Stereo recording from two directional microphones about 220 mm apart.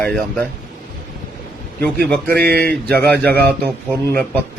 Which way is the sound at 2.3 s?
45° right (ahead or behind).